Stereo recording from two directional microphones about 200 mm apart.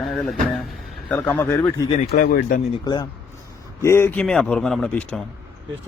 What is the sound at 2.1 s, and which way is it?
Speech, 45° left (ahead or behind).